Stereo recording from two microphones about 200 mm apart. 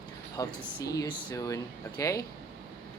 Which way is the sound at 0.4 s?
20° left (ahead or behind).